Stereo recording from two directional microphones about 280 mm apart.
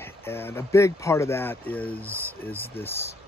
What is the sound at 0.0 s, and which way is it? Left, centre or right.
Speech, centre.